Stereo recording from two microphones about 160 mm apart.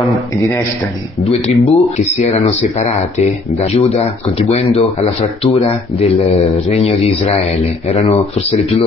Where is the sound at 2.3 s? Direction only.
45° left (ahead or behind).